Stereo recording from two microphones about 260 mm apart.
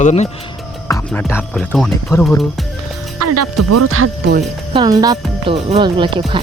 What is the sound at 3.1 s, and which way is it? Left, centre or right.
Music, right.